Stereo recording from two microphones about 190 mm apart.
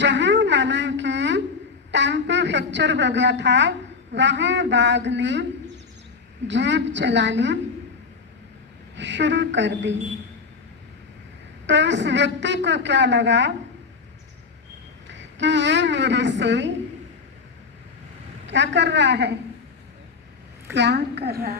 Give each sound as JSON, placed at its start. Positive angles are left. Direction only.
{"t": 0.0, "sound": "a sound", "side_deg": -70}
{"t": 1.9, "sound": "a woman's voice", "side_deg": -70}
{"t": 6.5, "sound": "a woman's voice", "side_deg": -70}
{"t": 9.0, "sound": "a woman's voice", "side_deg": -70}
{"t": 11.6, "sound": "a woman's voice", "side_deg": -70}
{"t": 15.0, "sound": "a woman's voice", "side_deg": -70}
{"t": 18.4, "sound": "a woman's voice", "side_deg": -70}
{"t": 20.7, "sound": "a woman's voice", "side_deg": -65}